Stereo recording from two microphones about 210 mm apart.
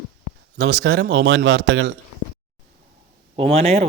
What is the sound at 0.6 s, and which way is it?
Speech, 60° right (ahead or behind).